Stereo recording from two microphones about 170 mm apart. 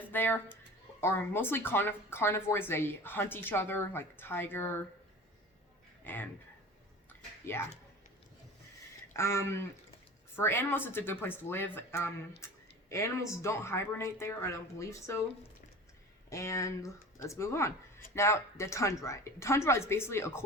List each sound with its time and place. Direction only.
0.1 s a woman's voice: 10° left (ahead or behind)
6.1 s a woman's voice: 10° left (ahead or behind)
7.1 s a sound: 15° left (ahead or behind)
9.1 s a woman's voice: 15° left (ahead or behind)
12.4 s a sound: 15° left (ahead or behind)
12.9 s a woman's voice: 15° left (ahead or behind)
16.3 s a woman's voice: 20° left (ahead or behind)